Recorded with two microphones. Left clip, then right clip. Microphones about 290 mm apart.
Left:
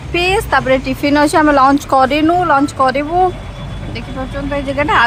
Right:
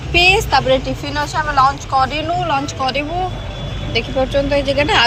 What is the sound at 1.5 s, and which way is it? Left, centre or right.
Speech, left.